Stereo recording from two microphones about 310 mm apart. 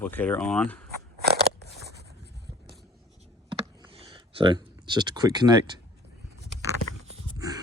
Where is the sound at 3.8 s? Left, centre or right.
Centre.